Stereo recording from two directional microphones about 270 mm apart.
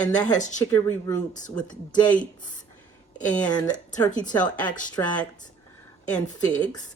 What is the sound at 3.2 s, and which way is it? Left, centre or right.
A woman's voice, centre.